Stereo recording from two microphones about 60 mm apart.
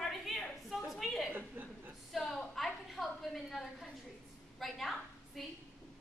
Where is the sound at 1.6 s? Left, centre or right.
Right.